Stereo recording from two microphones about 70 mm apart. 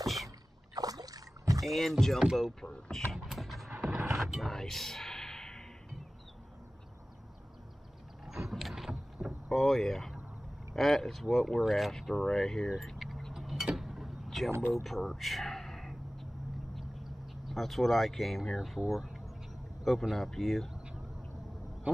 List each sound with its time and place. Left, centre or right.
0.0 s rowboat: centre
0.7 s rowboat: right
1.7 s speech: centre
3.3 s music: centre
4.1 s a sound: centre
8.3 s vehicle: centre
10.7 s speech: centre
13.3 s a sound: centre
13.7 s vehicle: centre
14.7 s a sound: centre
17.5 s speech: centre